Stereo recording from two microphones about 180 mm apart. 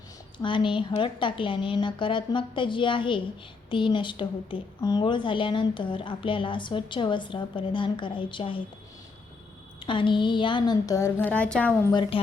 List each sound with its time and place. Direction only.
0.4 s a woman's voice: 25° left (ahead or behind)
9.8 s a woman's voice: 25° left (ahead or behind); by 11.8 s 5° left (ahead or behind)
11.9 s a woman's voice: 25° left (ahead or behind)